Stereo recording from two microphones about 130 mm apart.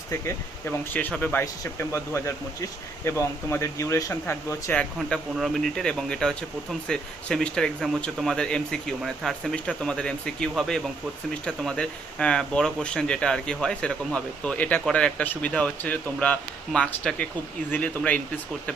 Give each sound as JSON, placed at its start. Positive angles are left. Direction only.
{"t": 0.1, "sound": "speech", "side_deg": 20}
{"t": 4.7, "sound": "speech", "side_deg": 5}